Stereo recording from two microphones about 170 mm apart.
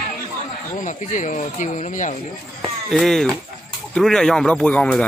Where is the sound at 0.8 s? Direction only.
45° left (ahead or behind).